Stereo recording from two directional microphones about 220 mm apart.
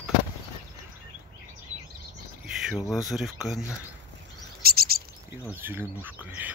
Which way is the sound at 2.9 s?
Centre (ahead or behind).